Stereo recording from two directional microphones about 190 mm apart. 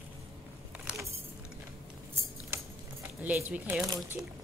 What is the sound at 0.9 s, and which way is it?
Keys jangling, 5° right (ahead or behind).